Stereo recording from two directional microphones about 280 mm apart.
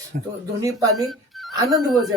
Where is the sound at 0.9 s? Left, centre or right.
Centre.